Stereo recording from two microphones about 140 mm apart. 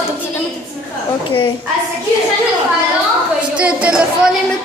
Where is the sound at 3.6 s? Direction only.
10° right (ahead or behind).